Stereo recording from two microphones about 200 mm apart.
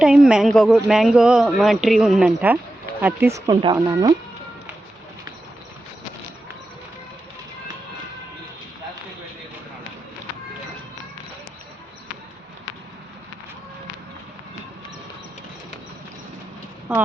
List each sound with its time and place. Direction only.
0.0 s a man's voice: 5° right (ahead or behind); by 4.1 s 20° right (ahead or behind)
16.9 s a man's voice: 5° right (ahead or behind)